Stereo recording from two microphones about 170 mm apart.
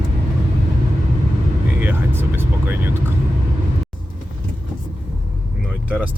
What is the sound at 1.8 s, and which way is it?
Speech, 10° right (ahead or behind).